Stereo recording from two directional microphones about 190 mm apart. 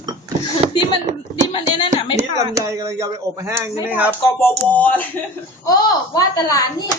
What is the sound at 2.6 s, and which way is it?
Speech, 15° right (ahead or behind).